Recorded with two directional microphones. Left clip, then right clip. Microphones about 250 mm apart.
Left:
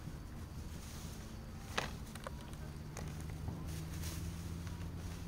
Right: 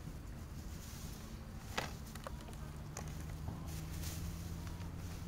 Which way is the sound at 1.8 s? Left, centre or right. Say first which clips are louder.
Left 2 dB; centre.